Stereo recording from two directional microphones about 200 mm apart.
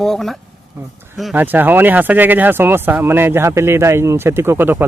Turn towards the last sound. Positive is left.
turn(degrees=-10)  # may be behind; listen again after turning